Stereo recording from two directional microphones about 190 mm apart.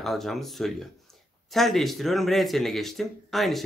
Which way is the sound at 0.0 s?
Centre (ahead or behind).